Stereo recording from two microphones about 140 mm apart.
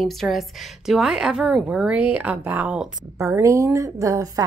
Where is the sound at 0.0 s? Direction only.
Centre (ahead or behind).